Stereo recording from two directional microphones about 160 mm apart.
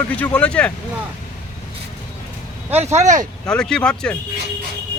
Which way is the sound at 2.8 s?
45° right (ahead or behind).